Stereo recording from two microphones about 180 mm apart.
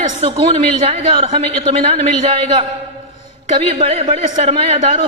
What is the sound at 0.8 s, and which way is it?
A man's voice, 35° right (ahead or behind).